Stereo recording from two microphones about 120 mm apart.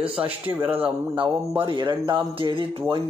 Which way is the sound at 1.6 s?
45° right (ahead or behind).